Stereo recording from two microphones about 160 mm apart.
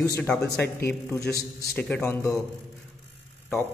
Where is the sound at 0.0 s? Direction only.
20° left (ahead or behind).